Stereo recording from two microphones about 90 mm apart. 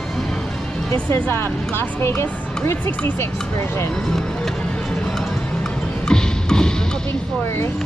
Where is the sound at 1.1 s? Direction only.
25° left (ahead or behind).